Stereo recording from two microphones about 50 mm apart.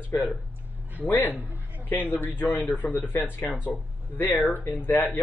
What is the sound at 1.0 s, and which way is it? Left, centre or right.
Speech, left.